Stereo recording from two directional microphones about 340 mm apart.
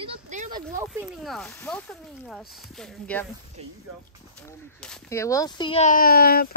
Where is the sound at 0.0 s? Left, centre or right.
Right.